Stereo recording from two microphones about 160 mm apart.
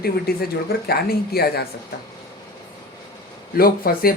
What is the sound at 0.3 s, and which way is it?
Speech, 75° left (ahead or behind).